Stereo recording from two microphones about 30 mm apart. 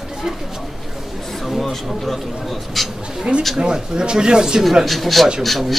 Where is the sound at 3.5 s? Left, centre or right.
Right.